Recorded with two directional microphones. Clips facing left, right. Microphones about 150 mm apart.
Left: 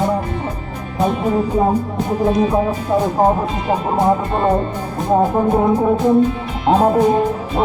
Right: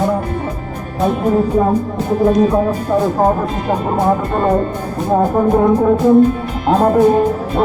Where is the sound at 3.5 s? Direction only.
Centre (ahead or behind).